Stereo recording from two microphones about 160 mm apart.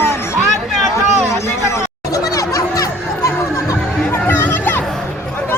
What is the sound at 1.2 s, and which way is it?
Chatter, 15° left (ahead or behind).